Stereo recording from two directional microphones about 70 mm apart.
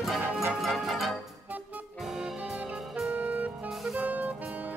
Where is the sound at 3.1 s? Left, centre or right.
Right.